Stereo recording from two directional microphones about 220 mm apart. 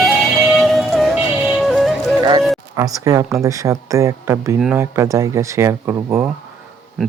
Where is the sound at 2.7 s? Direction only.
15° right (ahead or behind).